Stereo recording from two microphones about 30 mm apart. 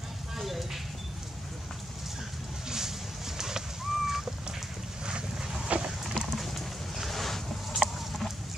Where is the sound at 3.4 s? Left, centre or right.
Centre.